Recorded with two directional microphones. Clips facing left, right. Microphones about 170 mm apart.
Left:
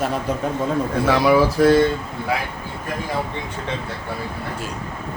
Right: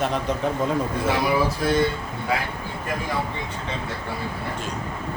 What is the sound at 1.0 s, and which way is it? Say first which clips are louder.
Speech: left 7 dB; 85° left.